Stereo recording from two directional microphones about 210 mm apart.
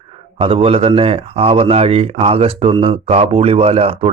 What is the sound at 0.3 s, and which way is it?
Speech, 25° right (ahead or behind).